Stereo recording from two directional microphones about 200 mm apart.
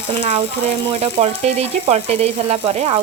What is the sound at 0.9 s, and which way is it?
Frying, 30° right (ahead or behind).